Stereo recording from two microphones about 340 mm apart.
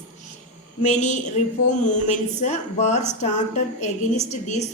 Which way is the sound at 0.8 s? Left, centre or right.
Left.